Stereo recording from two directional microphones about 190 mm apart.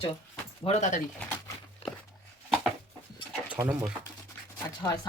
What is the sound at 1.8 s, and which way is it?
Walk, 30° left (ahead or behind).